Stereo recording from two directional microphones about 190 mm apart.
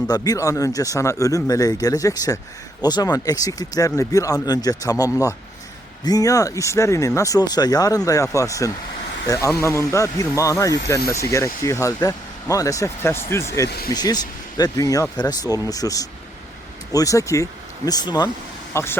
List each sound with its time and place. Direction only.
0.1 s speech: 20° left (ahead or behind)
13.7 s speech: 55° left (ahead or behind)
13.9 s speech: 20° left (ahead or behind)